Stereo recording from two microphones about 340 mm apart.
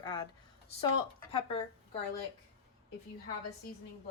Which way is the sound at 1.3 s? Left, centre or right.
Centre.